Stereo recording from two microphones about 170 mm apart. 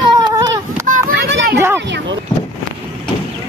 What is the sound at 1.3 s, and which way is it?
Children playing, 90° right.